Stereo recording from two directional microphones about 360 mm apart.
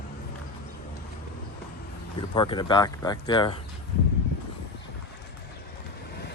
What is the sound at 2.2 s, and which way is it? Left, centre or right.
Speech, centre.